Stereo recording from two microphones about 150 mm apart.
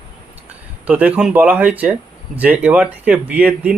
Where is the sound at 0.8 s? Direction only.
10° right (ahead or behind).